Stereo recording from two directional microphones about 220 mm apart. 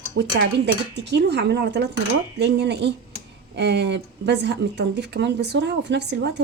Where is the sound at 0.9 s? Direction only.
50° right (ahead or behind).